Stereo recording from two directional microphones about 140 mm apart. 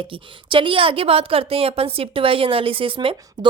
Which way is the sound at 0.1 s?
40° right (ahead or behind).